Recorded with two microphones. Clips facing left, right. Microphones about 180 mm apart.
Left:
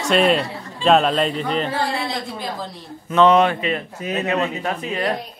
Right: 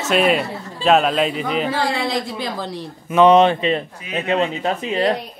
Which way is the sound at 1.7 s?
90° right.